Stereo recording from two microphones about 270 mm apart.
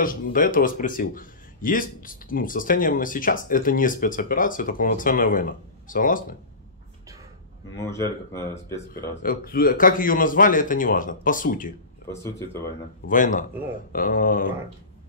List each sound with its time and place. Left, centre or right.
0.0 s speech: left
7.7 s speech: centre
9.2 s speech: left
12.1 s speech: centre
13.1 s speech: left